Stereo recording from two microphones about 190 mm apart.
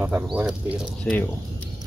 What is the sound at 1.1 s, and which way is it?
Speech, 5° left (ahead or behind).